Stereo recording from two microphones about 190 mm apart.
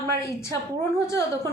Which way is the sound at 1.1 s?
15° left (ahead or behind).